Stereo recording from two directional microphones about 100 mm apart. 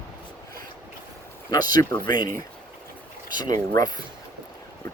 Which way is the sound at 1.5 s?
40° left (ahead or behind).